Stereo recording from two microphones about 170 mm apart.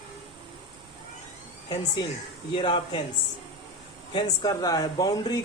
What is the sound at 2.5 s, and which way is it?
Speech, 30° left (ahead or behind).